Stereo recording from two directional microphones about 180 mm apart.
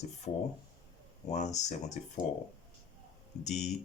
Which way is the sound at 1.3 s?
40° left (ahead or behind).